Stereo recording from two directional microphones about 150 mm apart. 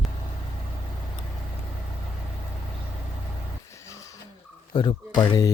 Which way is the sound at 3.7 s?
20° left (ahead or behind).